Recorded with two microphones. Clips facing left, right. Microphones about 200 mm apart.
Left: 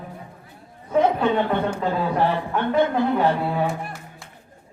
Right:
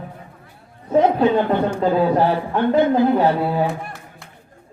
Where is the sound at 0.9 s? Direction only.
35° right (ahead or behind).